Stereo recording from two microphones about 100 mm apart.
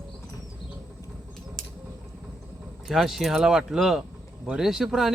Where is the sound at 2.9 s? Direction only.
Centre (ahead or behind).